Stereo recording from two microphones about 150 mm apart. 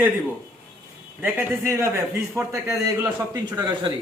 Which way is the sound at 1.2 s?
10° right (ahead or behind).